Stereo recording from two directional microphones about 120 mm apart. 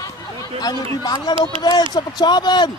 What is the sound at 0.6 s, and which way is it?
Speech, 35° left (ahead or behind).